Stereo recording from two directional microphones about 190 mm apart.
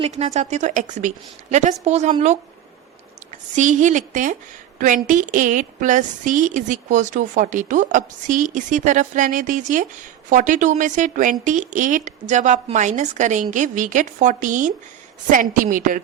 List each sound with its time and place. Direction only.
0.0 s a woman's voice: 35° right (ahead or behind)
3.5 s a woman's voice: 40° right (ahead or behind)